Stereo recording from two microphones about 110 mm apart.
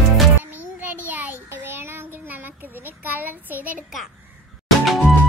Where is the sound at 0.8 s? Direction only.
15° right (ahead or behind).